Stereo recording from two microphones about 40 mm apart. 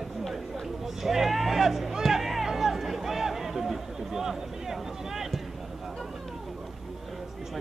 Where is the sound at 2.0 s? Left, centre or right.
Centre.